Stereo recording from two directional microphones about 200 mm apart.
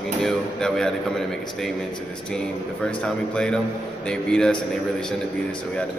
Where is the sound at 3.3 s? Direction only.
5° left (ahead or behind).